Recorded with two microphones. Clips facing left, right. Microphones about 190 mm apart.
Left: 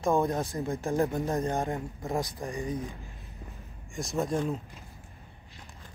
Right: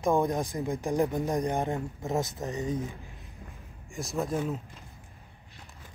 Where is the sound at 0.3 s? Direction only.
15° right (ahead or behind).